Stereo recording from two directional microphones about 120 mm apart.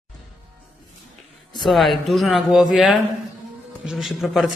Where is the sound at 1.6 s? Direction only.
Centre (ahead or behind).